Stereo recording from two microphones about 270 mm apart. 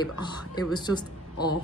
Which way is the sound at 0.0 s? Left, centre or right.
Centre.